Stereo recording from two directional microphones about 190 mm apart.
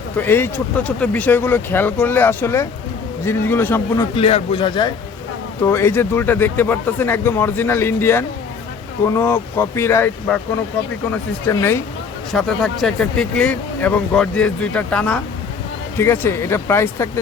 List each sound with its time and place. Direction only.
0.2 s speech: 10° left (ahead or behind)
4.1 s speech: 30° left (ahead or behind)
5.6 s speech: 15° left (ahead or behind)
12.3 s speech: centre (ahead or behind)